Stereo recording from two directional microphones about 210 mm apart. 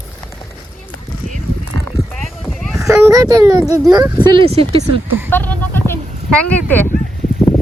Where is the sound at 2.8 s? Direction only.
15° right (ahead or behind).